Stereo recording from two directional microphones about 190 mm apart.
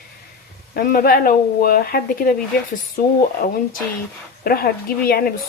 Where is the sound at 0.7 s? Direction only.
50° left (ahead or behind).